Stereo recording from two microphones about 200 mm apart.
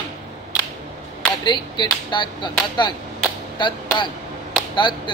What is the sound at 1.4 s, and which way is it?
Speech, 20° left (ahead or behind).